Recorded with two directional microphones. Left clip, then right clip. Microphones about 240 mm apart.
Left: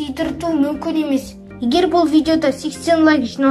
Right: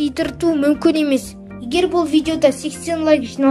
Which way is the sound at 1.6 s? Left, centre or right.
Centre.